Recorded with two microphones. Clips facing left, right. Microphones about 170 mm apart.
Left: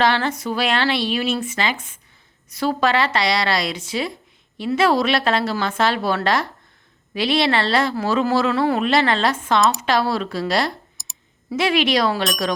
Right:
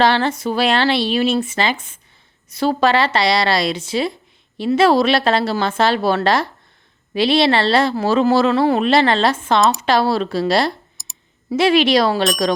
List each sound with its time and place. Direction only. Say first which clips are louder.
0.0 s a woman's voice: right 3 dB; 30° right (ahead or behind)
11.0 s clicking: even; centre (ahead or behind)
11.5 s a woman's voice: right 5 dB; 30° right (ahead or behind)